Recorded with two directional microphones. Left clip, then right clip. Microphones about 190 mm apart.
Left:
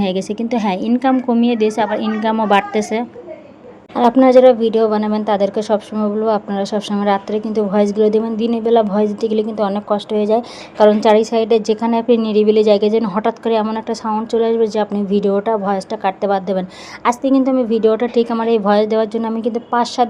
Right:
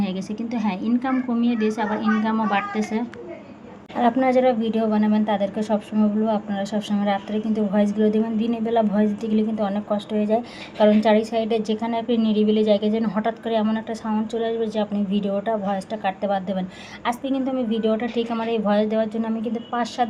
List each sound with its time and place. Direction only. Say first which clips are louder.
0.0 s a woman's voice: left 10 dB; 45° left (ahead or behind)